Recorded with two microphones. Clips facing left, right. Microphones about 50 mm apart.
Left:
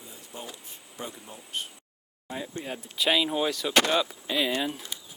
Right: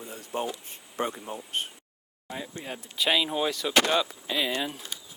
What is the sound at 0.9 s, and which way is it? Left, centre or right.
Speech, right.